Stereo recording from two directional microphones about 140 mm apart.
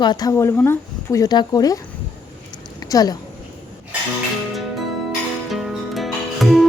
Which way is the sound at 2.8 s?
25° left (ahead or behind).